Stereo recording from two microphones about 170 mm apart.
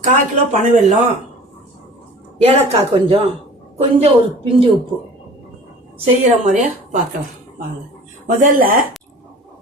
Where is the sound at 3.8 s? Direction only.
40° right (ahead or behind).